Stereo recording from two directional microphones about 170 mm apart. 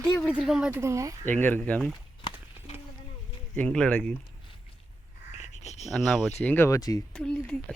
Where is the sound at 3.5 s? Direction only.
5° left (ahead or behind).